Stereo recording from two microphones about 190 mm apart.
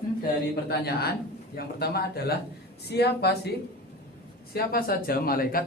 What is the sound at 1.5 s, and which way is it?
Speech, 55° left (ahead or behind).